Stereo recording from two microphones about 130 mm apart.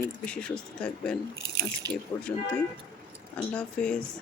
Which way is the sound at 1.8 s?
30° right (ahead or behind).